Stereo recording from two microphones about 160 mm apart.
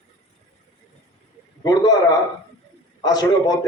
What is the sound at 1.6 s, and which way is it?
Speech, 25° left (ahead or behind).